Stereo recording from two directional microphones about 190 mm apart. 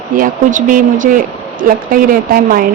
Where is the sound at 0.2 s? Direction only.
45° right (ahead or behind).